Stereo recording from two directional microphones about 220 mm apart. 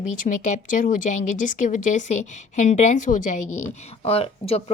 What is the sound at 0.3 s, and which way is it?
A woman's voice, 30° left (ahead or behind).